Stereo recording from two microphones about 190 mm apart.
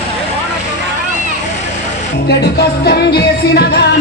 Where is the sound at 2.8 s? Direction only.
60° left (ahead or behind).